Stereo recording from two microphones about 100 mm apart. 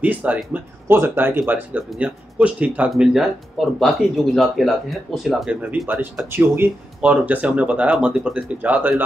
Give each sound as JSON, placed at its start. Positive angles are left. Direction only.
{"t": 0.0, "sound": "speech", "side_deg": -15}
{"t": 5.5, "sound": "speech", "side_deg": -15}